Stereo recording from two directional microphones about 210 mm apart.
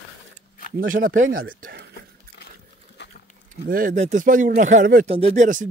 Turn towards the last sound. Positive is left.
turn(degrees=-35)  # may be behind; listen again after turning